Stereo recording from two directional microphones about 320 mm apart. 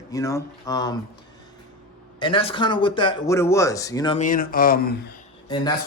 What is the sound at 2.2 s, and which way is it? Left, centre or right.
Speech, centre.